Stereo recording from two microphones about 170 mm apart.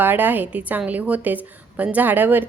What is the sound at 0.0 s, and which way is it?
A woman's voice, 10° right (ahead or behind).